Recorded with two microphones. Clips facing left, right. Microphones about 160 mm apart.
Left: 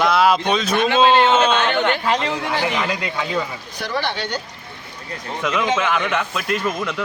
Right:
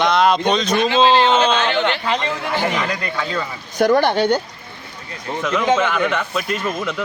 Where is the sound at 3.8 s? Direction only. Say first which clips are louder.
Right 10 dB; 50° right (ahead or behind).